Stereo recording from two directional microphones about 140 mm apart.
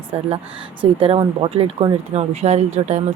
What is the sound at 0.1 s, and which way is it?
Speech, 45° right (ahead or behind).